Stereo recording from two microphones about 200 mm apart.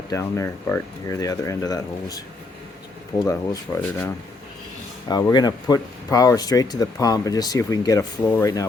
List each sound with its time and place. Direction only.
0.1 s speech: 15° left (ahead or behind)
3.2 s speech: 20° left (ahead or behind)
5.0 s speech: 20° left (ahead or behind)